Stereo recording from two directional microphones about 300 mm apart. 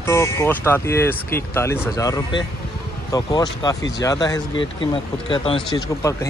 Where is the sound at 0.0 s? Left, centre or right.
Centre.